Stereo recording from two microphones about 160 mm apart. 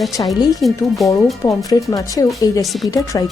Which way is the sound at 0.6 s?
Centre (ahead or behind).